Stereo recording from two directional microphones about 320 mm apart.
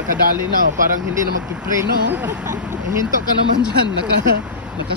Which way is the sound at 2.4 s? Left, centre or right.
Right.